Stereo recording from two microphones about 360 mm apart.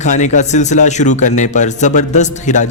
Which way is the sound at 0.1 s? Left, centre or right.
Centre.